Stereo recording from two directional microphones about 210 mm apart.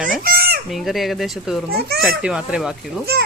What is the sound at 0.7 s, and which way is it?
Speech, centre (ahead or behind).